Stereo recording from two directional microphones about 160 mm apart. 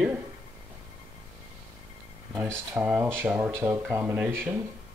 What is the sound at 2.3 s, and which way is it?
Speech, 10° right (ahead or behind).